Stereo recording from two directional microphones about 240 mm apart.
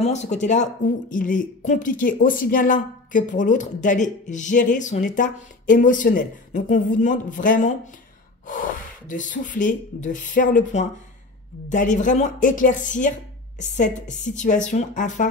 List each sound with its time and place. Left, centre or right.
0.0 s speech: left